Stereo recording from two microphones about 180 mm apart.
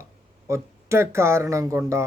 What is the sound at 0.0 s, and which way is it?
Speech, 15° right (ahead or behind).